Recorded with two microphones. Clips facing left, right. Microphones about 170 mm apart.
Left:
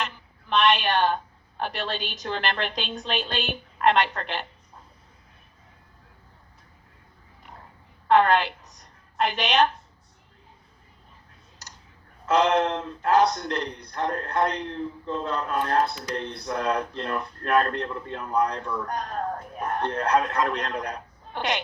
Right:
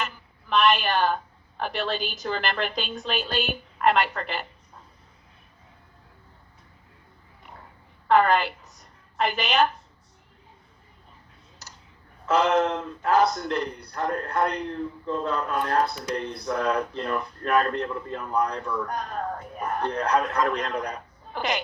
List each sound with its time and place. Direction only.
0.0 s a woman's voice: centre (ahead or behind)
8.0 s a woman's voice: 5° right (ahead or behind)
12.3 s speech: centre (ahead or behind)